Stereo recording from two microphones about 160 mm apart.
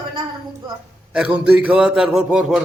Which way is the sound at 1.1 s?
5° right (ahead or behind).